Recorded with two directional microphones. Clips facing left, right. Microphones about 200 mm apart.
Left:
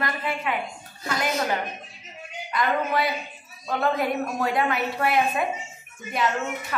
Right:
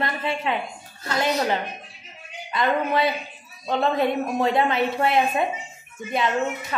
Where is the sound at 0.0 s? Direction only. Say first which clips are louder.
Right 2 dB; 25° right (ahead or behind).